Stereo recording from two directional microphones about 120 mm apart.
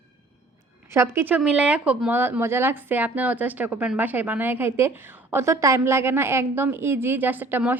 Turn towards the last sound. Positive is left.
turn(degrees=-15)  # may be behind; listen again after turning